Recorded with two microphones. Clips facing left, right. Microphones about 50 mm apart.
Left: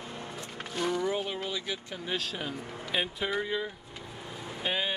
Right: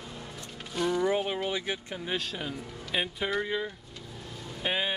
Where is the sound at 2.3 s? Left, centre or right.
Centre.